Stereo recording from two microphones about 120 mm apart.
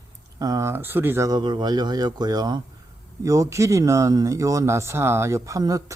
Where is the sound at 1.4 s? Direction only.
40° right (ahead or behind).